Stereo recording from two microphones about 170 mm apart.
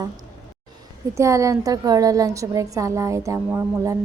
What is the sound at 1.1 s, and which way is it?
A woman's voice, 20° right (ahead or behind).